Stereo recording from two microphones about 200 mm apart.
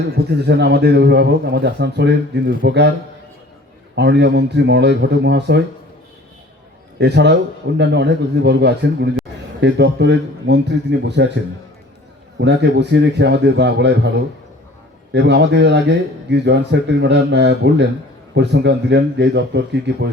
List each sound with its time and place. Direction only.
0.3 s a man's voice: 55° right (ahead or behind)
3.9 s a man's voice: 60° right (ahead or behind)
7.0 s a man's voice: 55° right (ahead or behind)
12.4 s a man's voice: 60° right (ahead or behind)
15.1 s a man's voice: 60° right (ahead or behind)